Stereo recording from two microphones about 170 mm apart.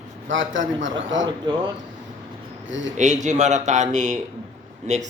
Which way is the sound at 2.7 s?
90° right.